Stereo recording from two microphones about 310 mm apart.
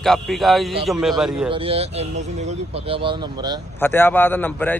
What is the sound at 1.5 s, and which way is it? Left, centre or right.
Speech, centre.